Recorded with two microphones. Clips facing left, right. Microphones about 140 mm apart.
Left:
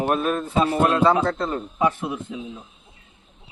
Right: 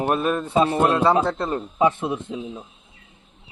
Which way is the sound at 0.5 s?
25° right (ahead or behind).